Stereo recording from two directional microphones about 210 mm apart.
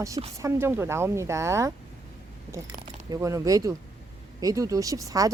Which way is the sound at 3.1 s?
15° right (ahead or behind).